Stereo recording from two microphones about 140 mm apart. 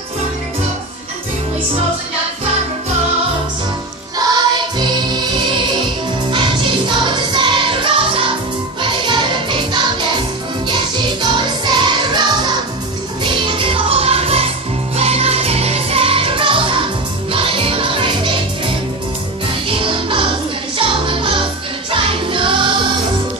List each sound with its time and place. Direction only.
4.3 s music: 30° right (ahead or behind)
6.3 s music: 35° right (ahead or behind)
11.6 s music: 30° right (ahead or behind)
19.7 s music: 40° right (ahead or behind)